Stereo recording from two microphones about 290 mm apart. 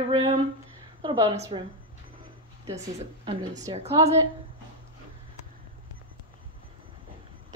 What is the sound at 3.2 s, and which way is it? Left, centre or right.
Speech, centre.